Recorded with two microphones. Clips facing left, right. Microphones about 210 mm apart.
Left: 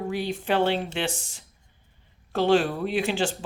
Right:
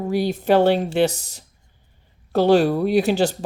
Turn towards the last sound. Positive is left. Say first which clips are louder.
# right 7 dB
turn(degrees=-40)  # may be behind; listen again after turning